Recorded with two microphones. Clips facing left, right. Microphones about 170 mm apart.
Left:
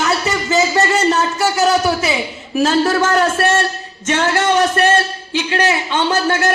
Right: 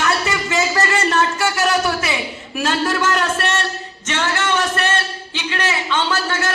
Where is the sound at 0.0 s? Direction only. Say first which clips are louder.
Left 2 dB; 25° left (ahead or behind).